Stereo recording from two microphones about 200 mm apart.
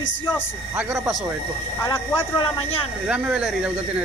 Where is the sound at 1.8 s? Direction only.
15° left (ahead or behind).